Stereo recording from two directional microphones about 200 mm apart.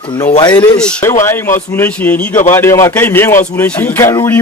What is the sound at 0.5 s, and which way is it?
A man's voice, 5° left (ahead or behind).